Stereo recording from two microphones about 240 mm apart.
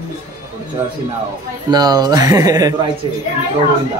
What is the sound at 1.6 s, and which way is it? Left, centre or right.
Speech, centre.